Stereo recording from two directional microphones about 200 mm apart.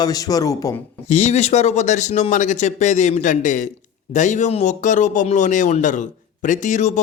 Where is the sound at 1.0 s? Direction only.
35° left (ahead or behind).